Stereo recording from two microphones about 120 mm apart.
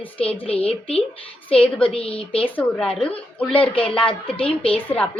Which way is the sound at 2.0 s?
50° left (ahead or behind).